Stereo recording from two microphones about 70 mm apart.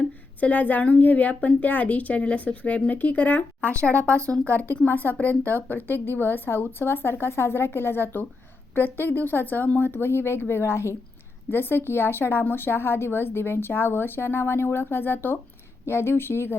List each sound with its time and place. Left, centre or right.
0.3 s a woman's voice: left